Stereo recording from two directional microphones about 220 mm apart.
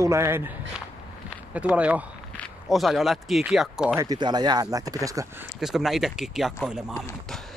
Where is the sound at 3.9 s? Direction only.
20° right (ahead or behind).